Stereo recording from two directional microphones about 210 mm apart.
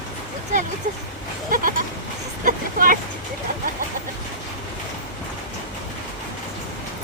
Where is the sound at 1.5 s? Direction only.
40° right (ahead or behind).